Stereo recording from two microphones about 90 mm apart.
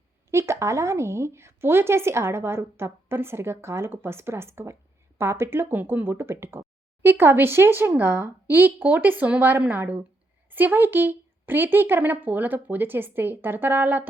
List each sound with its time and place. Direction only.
0.3 s speech: 30° right (ahead or behind)